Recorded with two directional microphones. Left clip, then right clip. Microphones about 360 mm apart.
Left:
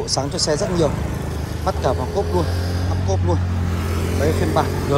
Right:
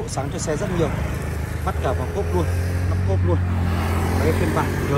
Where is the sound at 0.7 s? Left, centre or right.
Left.